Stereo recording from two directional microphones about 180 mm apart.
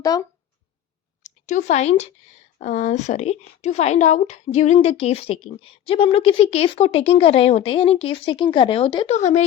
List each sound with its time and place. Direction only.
0.0 s speech: 20° left (ahead or behind)
1.2 s speech: 40° left (ahead or behind)
9.1 s speech: 40° left (ahead or behind)